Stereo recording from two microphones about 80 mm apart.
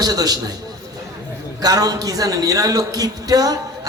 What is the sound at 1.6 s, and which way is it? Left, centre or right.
A man's voice, right.